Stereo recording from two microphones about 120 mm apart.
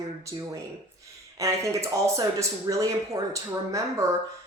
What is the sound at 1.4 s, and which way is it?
Speech, 25° right (ahead or behind).